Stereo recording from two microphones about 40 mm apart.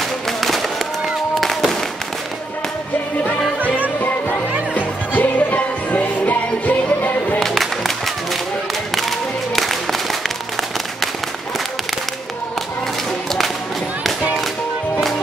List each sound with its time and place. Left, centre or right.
0.4 s a sound: centre
4.0 s music: left
7.3 s music: centre
9.6 s music: centre